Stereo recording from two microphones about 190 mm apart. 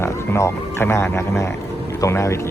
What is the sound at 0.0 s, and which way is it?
Speech, 15° left (ahead or behind).